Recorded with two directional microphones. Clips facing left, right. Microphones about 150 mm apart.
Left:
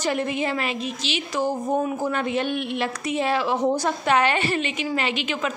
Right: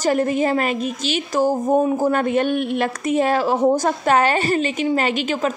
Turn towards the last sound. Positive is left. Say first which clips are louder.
# right 5 dB
turn(degrees=-45)  # may be behind; listen again after turning